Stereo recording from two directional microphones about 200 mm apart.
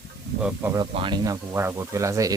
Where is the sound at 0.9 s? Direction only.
25° right (ahead or behind).